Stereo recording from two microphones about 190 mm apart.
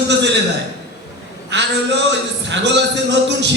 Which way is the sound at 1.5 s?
65° right (ahead or behind).